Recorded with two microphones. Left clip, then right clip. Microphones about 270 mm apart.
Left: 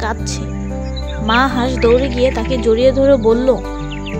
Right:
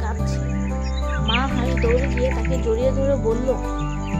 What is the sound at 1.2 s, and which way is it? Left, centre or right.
Speech, left.